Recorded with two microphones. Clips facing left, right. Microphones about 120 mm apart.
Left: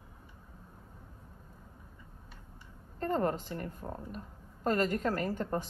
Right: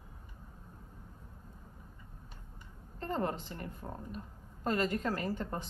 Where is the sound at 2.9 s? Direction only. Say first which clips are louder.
Left 4 dB; 45° left (ahead or behind).